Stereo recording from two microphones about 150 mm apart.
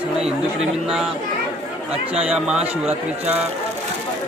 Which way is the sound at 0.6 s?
5° right (ahead or behind).